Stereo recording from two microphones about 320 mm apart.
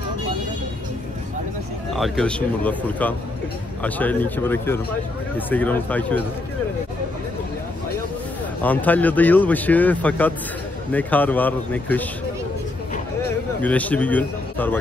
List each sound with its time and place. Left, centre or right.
2.0 s speech: centre
8.6 s speech: centre
13.6 s speech: centre